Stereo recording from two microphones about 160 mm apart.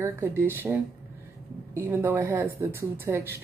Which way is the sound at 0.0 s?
15° right (ahead or behind).